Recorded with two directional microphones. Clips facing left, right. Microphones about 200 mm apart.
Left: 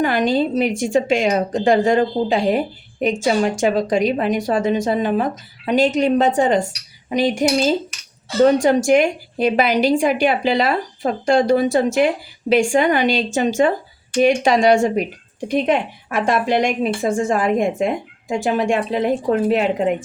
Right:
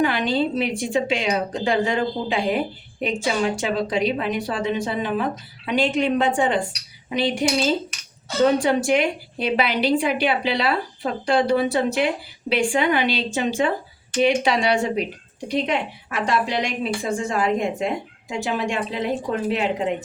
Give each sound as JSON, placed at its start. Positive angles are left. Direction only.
{"t": 0.0, "sound": "a woman's voice", "side_deg": 45}